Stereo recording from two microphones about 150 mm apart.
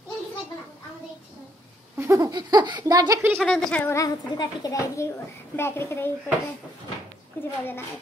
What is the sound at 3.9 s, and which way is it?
A woman's voice, 25° left (ahead or behind).